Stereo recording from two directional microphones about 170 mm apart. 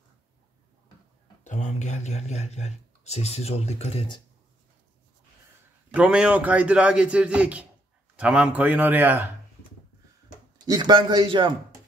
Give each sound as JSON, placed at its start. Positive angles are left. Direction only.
{"t": 1.4, "sound": "speech", "side_deg": 45}
{"t": 5.9, "sound": "a man's voice", "side_deg": -5}
{"t": 10.6, "sound": "a man's voice", "side_deg": -25}